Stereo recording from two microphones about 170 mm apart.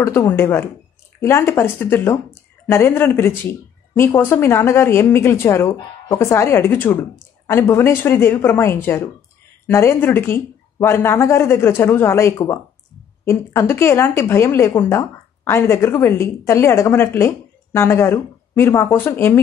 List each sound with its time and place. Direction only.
0.0 s speech: 15° left (ahead or behind)